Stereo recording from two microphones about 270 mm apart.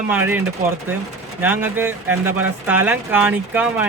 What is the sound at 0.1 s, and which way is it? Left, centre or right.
A man's voice, centre.